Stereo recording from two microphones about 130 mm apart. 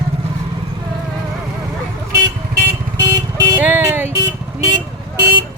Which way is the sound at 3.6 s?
15° right (ahead or behind).